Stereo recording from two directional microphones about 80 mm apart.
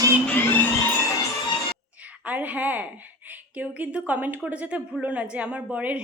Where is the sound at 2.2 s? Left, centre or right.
Centre.